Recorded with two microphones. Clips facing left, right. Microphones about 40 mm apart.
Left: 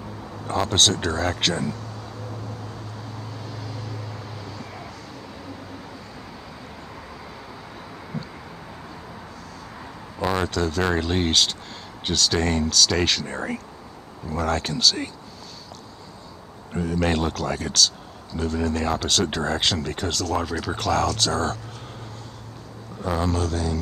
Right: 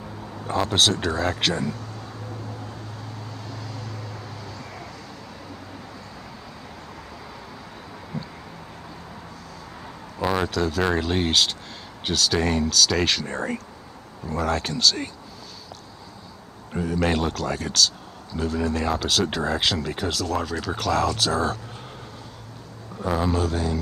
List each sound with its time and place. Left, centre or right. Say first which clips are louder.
0.5 s speech: even; centre
3.4 s vehicle: left 1 dB; centre
8.1 s vehicle: even; centre
10.1 s speech: even; centre
16.7 s speech: even; centre
23.0 s speech: right 1 dB; centre